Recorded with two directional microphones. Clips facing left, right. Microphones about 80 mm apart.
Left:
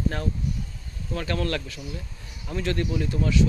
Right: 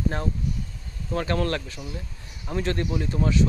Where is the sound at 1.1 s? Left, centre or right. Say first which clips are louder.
Right 2 dB; right.